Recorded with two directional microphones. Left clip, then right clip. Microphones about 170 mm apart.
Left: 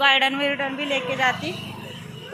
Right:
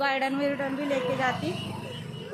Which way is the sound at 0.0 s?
5° right (ahead or behind).